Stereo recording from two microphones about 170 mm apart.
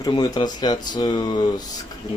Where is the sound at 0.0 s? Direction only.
25° left (ahead or behind).